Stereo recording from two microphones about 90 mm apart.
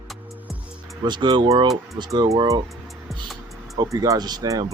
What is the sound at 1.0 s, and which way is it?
Speech, 55° right (ahead or behind).